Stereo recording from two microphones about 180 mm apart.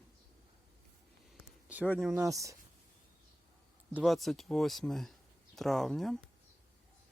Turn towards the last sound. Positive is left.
turn(degrees=0)  # may be behind; listen again after turning